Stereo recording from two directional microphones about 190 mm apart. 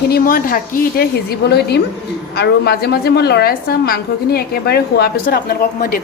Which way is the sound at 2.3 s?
55° left (ahead or behind).